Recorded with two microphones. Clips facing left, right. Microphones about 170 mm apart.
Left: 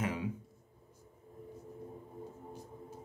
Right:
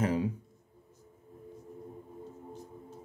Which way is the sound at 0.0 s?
40° right (ahead or behind).